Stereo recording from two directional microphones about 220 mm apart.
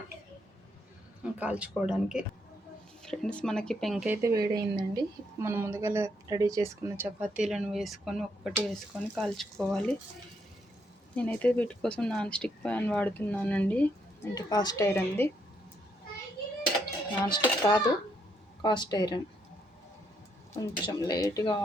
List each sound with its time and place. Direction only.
1.2 s speech: 5° right (ahead or behind)
11.1 s speech: 5° left (ahead or behind)
14.3 s speech: 15° left (ahead or behind)
17.2 s speech: 20° left (ahead or behind)
20.5 s speech: 15° left (ahead or behind)